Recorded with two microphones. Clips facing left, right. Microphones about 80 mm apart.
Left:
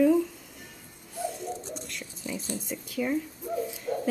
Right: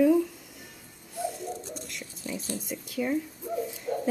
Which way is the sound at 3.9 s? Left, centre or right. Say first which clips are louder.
Even; centre.